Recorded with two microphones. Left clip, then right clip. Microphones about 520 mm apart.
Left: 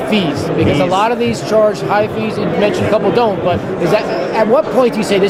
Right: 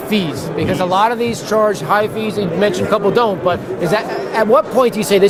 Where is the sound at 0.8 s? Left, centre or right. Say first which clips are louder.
Right 3 dB; right.